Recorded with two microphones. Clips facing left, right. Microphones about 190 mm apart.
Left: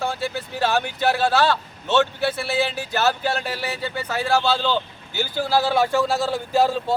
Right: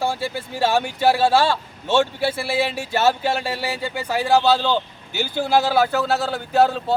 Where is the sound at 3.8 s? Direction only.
10° right (ahead or behind).